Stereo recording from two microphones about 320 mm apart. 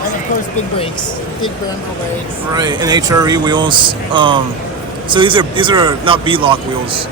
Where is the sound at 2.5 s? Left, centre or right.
Centre.